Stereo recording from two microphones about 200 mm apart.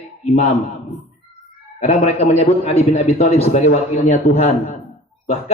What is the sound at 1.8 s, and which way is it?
A man's voice, 35° left (ahead or behind).